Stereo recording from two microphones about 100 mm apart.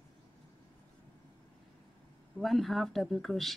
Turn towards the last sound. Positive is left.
turn(degrees=0)  # may be behind; listen again after turning